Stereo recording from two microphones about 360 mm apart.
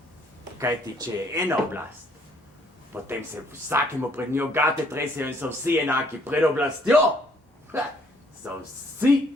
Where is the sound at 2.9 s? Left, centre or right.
Centre.